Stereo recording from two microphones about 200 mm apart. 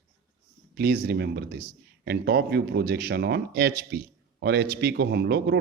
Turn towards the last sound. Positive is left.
turn(degrees=-55)  # may be behind; listen again after turning